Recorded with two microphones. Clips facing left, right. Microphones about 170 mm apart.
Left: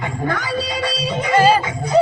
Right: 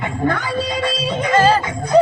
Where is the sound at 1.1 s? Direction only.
10° left (ahead or behind).